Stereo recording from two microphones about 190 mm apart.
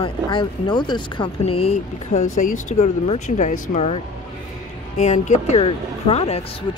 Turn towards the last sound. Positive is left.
turn(degrees=30)  # may be behind; listen again after turning